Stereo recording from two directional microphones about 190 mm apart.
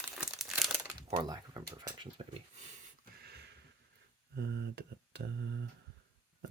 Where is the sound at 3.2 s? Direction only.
60° right (ahead or behind).